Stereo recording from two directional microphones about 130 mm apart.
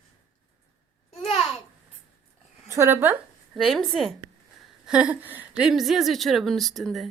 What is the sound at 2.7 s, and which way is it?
Speech, 20° right (ahead or behind).